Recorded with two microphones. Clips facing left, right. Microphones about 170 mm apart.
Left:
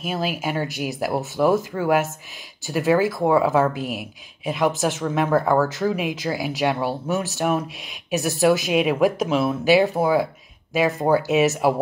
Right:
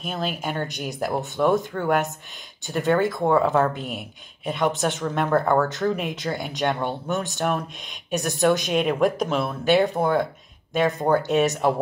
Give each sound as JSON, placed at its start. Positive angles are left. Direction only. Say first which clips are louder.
{"t": 0.0, "sound": "speech", "louder": "left 3 dB", "side_deg": 5}